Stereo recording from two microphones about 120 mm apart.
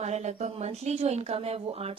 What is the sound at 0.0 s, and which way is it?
A woman's voice, 70° right (ahead or behind).